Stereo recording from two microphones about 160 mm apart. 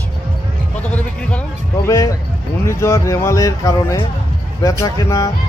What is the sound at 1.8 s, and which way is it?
Speech, 20° left (ahead or behind).